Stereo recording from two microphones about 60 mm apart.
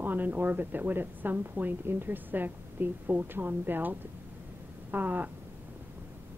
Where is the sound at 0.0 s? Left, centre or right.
Right.